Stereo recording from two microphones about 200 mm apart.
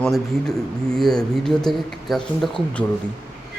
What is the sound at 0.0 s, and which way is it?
Speech, 5° left (ahead or behind).